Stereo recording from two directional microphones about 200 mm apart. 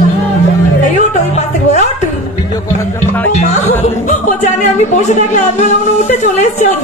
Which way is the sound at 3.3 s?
35° left (ahead or behind).